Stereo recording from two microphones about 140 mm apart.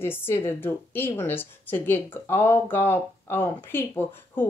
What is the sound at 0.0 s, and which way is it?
Speech, 15° left (ahead or behind).